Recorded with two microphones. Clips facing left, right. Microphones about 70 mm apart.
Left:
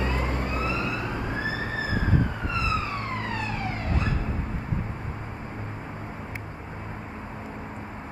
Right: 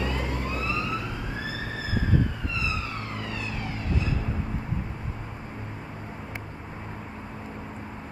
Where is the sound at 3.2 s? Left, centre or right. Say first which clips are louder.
Left 3 dB; left.